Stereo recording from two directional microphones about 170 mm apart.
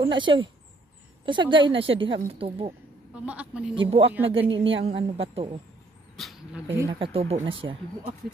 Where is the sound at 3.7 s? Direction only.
30° right (ahead or behind).